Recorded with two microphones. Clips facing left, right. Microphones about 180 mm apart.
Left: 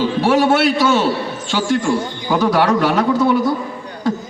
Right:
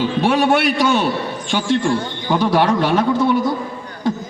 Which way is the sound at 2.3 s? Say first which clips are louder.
Left 1 dB; 25° right (ahead or behind).